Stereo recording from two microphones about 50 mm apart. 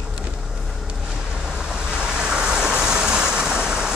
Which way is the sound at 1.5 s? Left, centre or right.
Centre.